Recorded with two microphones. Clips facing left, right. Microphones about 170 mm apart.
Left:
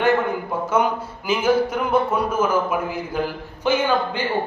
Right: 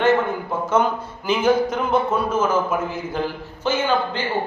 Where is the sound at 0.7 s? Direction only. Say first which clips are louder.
Right 1 dB; 10° left (ahead or behind).